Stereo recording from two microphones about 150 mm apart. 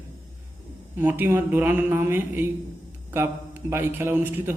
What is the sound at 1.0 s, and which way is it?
A man's voice, 15° right (ahead or behind).